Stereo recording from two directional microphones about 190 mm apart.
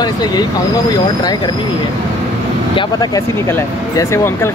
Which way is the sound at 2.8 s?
20° left (ahead or behind).